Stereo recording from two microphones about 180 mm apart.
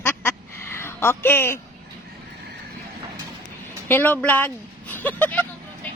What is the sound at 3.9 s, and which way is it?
Speech, 10° left (ahead or behind).